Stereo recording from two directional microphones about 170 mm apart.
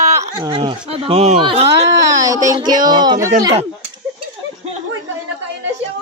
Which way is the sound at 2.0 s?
20° right (ahead or behind).